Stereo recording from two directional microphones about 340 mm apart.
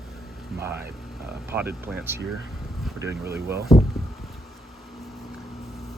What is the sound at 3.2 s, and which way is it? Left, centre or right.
Speech, right.